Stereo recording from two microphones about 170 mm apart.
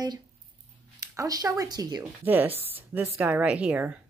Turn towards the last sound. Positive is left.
turn(degrees=-10)  # may be behind; listen again after turning